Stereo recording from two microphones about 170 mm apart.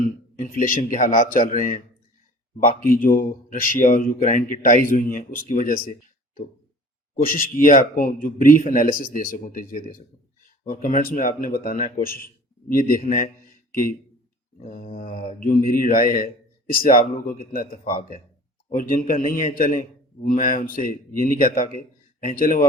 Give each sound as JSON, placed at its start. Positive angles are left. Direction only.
{"t": 0.3, "sound": "speech", "side_deg": 50}
{"t": 7.2, "sound": "speech", "side_deg": 55}
{"t": 13.0, "sound": "speech", "side_deg": 45}
{"t": 14.7, "sound": "speech", "side_deg": 50}